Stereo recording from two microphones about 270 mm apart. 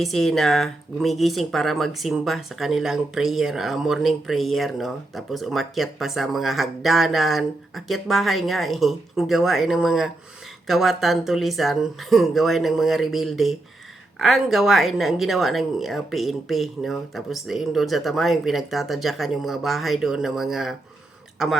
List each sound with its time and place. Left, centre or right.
0.0 s speech: centre